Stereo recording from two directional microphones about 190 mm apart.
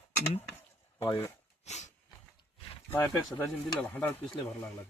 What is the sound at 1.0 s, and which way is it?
Speech, 15° left (ahead or behind).